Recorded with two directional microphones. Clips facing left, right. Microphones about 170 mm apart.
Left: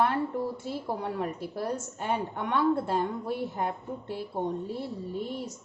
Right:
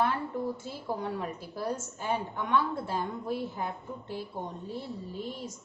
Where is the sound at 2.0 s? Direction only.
60° left (ahead or behind).